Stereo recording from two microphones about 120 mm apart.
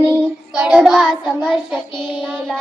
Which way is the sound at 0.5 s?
5° right (ahead or behind).